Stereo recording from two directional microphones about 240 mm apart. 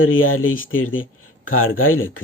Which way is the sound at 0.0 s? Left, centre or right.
Left.